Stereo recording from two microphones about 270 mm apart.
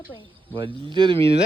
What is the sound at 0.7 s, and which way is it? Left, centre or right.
Speech, centre.